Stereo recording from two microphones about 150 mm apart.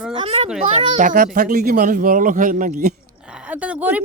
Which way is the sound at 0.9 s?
65° right (ahead or behind).